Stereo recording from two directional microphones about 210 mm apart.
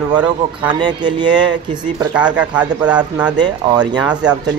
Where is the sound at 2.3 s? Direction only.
5° right (ahead or behind).